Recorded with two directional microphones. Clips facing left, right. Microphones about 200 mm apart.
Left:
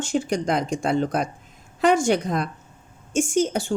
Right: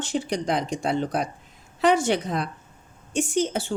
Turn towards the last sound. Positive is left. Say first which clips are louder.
# left 3 dB
turn(degrees=45)  # may be behind; listen again after turning